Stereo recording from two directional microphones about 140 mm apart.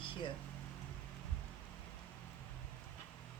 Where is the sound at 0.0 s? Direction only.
35° left (ahead or behind).